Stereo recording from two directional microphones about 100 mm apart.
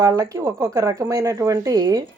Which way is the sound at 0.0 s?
35° right (ahead or behind).